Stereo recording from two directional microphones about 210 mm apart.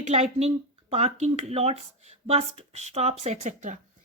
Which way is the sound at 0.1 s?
30° right (ahead or behind).